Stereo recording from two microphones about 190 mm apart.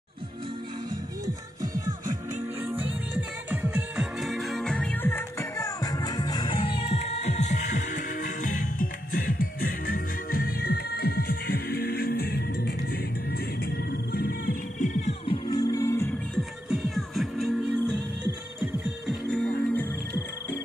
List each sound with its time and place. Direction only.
1.2 s music: 20° right (ahead or behind); by 14.9 s 50° left (ahead or behind)
15.2 s music: 20° left (ahead or behind)
16.3 s music: centre (ahead or behind)
19.3 s music: 10° left (ahead or behind)